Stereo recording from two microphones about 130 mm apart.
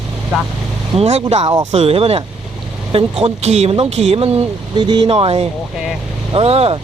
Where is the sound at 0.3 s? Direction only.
5° right (ahead or behind).